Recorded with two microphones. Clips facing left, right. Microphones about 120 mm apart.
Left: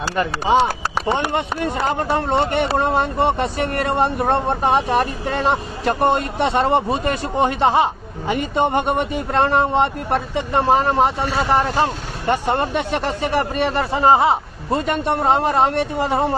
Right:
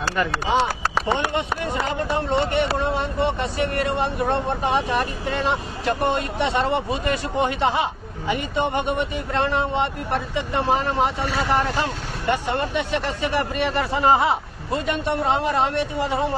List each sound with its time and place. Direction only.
1.1 s speech: 45° left (ahead or behind); by 14.8 s 30° left (ahead or behind)
14.9 s speech: 45° left (ahead or behind)